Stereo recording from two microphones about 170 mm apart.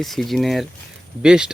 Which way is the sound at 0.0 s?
Centre (ahead or behind).